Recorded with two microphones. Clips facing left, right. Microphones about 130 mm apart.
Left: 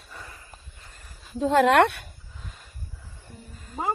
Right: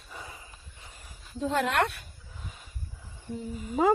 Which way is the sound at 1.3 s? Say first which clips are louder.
Left 8 dB; 90° left.